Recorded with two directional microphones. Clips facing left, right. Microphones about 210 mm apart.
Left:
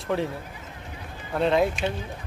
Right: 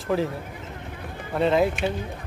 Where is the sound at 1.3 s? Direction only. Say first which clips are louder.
Right 1 dB; centre (ahead or behind).